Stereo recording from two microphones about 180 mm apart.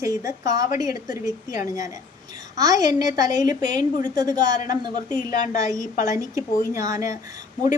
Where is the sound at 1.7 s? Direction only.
20° right (ahead or behind).